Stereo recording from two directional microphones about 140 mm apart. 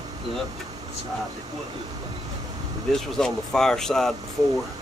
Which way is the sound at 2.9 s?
5° left (ahead or behind).